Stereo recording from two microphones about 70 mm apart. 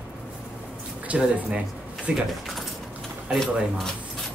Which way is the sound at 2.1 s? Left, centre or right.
Centre.